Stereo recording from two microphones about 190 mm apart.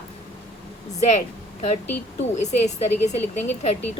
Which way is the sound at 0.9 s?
35° left (ahead or behind).